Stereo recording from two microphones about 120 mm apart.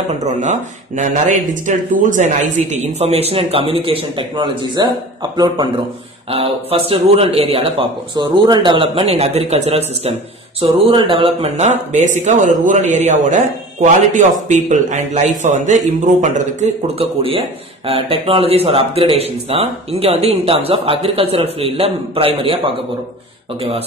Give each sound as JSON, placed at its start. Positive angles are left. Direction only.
{"t": 0.1, "sound": "speech", "side_deg": -75}
{"t": 2.7, "sound": "speech", "side_deg": -65}
{"t": 6.3, "sound": "speech", "side_deg": -55}
{"t": 8.2, "sound": "speech", "side_deg": -35}
{"t": 10.6, "sound": "speech", "side_deg": -45}